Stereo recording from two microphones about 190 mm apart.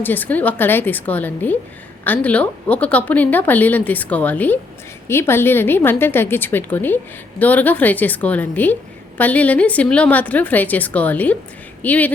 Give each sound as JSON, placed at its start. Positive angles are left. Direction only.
{"t": 0.0, "sound": "a woman's voice", "side_deg": 10}